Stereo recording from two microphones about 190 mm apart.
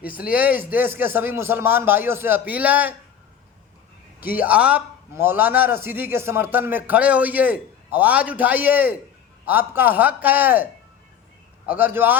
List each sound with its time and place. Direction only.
0.3 s a man's voice: 10° right (ahead or behind)
4.2 s a man's voice: 10° right (ahead or behind)
11.7 s a man's voice: 10° right (ahead or behind)